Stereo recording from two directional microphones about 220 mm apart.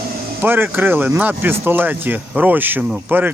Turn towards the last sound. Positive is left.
turn(degrees=-10)  # may be behind; listen again after turning